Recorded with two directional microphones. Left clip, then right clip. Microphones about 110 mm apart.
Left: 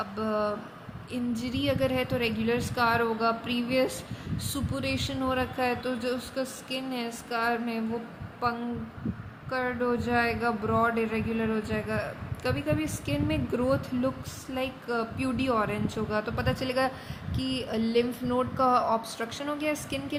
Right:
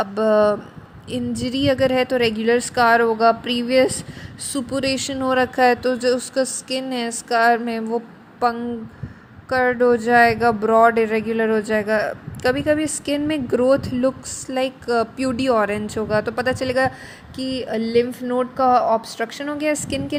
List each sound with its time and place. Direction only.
0.0 s speech: 90° right
1.1 s speech: 60° right (ahead or behind)